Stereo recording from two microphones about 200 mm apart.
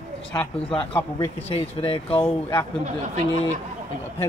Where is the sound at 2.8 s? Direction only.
35° right (ahead or behind).